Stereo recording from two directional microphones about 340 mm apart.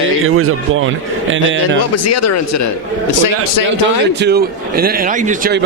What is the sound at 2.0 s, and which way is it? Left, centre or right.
Speech, left.